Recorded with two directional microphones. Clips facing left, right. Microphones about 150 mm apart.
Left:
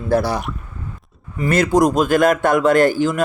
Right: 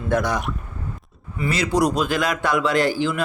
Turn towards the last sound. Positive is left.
turn(degrees=50)  # may be behind; listen again after turning